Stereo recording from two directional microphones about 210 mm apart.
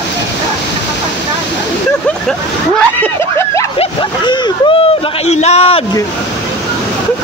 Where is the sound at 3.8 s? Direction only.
20° left (ahead or behind).